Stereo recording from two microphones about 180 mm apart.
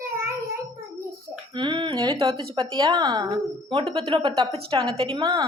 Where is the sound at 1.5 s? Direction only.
25° right (ahead or behind).